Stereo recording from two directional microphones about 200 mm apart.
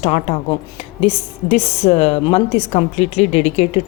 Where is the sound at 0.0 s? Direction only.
30° left (ahead or behind).